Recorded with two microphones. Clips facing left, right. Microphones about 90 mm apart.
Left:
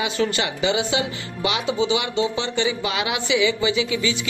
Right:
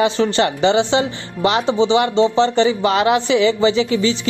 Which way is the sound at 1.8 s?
30° right (ahead or behind).